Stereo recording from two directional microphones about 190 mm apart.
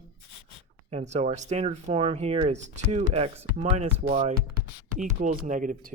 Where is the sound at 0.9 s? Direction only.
35° right (ahead or behind).